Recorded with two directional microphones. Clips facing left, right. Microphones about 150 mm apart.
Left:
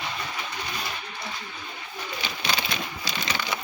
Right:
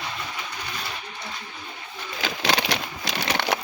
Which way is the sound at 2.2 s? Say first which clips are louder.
Right 6 dB; 80° right.